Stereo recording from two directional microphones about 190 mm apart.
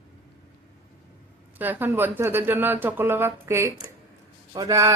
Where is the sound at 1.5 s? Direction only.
10° right (ahead or behind).